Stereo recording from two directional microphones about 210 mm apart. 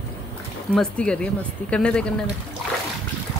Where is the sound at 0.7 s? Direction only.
5° left (ahead or behind).